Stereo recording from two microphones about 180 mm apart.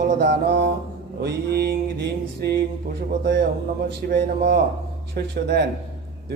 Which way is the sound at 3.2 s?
65° right (ahead or behind).